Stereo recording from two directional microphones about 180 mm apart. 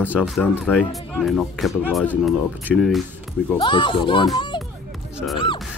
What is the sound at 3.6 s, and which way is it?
Speech, 25° left (ahead or behind).